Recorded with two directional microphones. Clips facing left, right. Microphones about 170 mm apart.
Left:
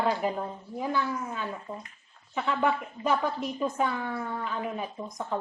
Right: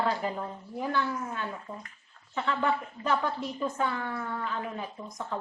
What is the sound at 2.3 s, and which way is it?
A woman's voice, 15° left (ahead or behind).